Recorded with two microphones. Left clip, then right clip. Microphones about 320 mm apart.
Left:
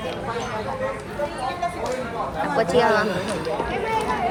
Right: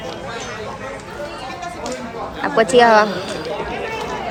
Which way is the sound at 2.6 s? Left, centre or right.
Right.